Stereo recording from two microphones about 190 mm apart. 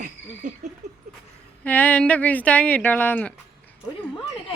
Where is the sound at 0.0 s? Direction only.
40° right (ahead or behind).